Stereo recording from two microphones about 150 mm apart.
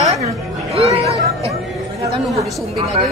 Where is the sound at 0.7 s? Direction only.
45° right (ahead or behind).